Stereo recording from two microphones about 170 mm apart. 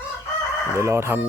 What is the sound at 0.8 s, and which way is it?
Speech, 15° right (ahead or behind).